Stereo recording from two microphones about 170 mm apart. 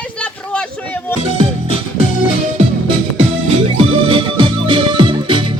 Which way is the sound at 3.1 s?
35° right (ahead or behind).